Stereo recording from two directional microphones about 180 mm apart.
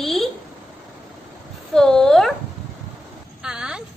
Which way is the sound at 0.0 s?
Centre (ahead or behind).